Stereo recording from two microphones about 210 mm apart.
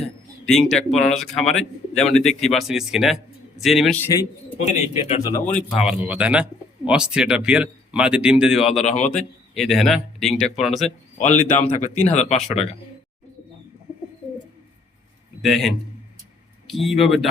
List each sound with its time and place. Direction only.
0.4 s speech: centre (ahead or behind)
4.0 s a man's voice: 15° left (ahead or behind)
4.6 s speech: 30° left (ahead or behind)
5.5 s speech: 5° right (ahead or behind)
8.8 s speech: 35° left (ahead or behind)
9.1 s speech: centre (ahead or behind)
11.2 s speech: 35° left (ahead or behind)
15.4 s speech: centre (ahead or behind)